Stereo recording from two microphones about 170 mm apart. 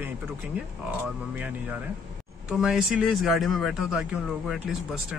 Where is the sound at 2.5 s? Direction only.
5° right (ahead or behind).